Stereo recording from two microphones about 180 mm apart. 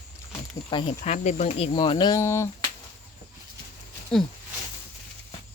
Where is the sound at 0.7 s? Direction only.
25° left (ahead or behind).